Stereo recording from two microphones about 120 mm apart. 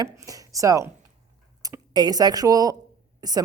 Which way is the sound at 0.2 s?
30° right (ahead or behind).